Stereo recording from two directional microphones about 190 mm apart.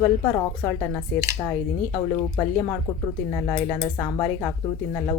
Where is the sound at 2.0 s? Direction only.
25° left (ahead or behind).